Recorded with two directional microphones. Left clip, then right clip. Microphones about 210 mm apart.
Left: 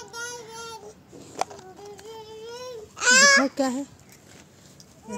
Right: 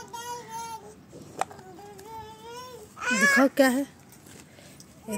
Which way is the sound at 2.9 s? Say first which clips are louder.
Left 6 dB; 45° left (ahead or behind).